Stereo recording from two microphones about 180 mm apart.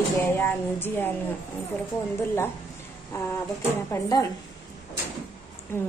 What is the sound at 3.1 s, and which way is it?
A woman's voice, 15° left (ahead or behind).